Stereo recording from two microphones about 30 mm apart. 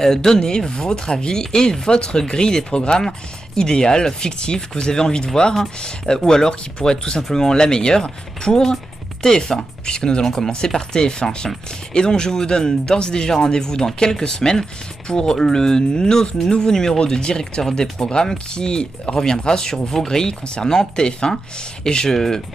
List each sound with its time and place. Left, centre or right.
0.0 s speech: centre
16.3 s speech: left
16.6 s speech: centre
18.0 s speech: left